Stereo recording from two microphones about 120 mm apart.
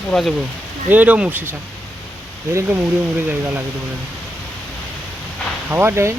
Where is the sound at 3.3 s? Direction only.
15° right (ahead or behind).